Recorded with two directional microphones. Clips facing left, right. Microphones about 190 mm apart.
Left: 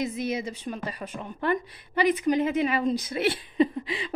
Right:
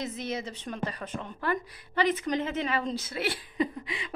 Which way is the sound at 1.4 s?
20° left (ahead or behind).